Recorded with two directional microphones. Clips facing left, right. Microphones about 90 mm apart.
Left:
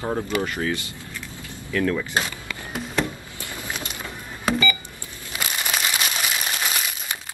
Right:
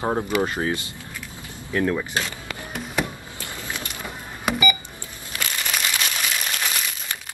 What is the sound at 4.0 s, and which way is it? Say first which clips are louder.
Power windows: even; 15° right (ahead or behind).